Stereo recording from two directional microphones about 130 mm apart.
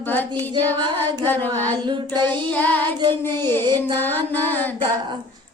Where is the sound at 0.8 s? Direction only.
35° right (ahead or behind).